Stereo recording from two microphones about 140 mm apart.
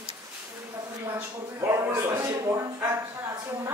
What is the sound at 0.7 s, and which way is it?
A man's voice, 20° right (ahead or behind).